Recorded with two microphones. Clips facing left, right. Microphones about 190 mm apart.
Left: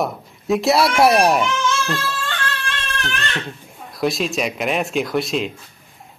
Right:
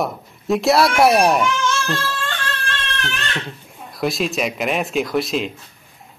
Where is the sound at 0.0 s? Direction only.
Centre (ahead or behind).